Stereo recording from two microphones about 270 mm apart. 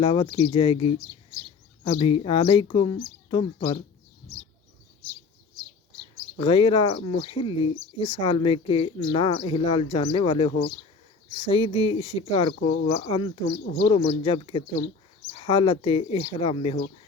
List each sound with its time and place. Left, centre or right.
0.0 s speech: centre
0.9 s speech: centre
1.8 s speech: centre
6.3 s speech: centre
12.5 s speech: left